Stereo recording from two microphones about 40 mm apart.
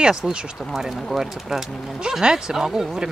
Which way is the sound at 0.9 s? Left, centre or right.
Centre.